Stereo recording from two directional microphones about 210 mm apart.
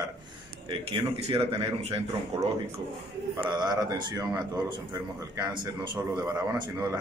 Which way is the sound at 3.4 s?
20° right (ahead or behind).